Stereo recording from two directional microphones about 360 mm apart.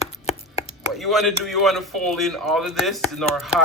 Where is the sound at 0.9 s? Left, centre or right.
Centre.